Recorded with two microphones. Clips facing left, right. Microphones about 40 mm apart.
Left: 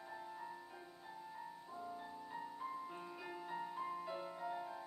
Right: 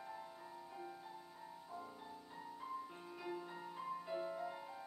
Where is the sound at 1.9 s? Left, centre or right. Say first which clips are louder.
Left 5 dB; centre.